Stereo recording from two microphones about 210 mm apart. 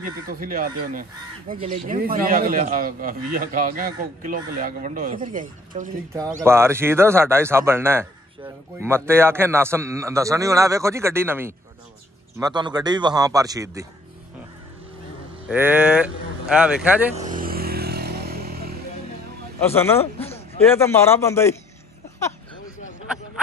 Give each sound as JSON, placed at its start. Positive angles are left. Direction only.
{"t": 0.3, "sound": "a man's voice", "side_deg": -40}
{"t": 6.4, "sound": "a man's voice", "side_deg": -10}
{"t": 15.4, "sound": "a man's voice", "side_deg": -5}
{"t": 17.1, "sound": "vehicle", "side_deg": -35}
{"t": 19.6, "sound": "a man's voice", "side_deg": 10}